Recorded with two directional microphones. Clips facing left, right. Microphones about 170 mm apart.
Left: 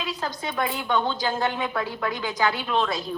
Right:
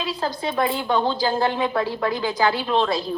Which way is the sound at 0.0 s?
30° right (ahead or behind).